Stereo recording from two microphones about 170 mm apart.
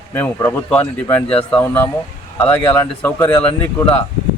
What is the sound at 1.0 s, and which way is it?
Speech, 30° left (ahead or behind).